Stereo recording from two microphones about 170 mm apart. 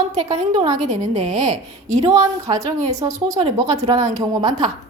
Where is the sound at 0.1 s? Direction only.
40° right (ahead or behind).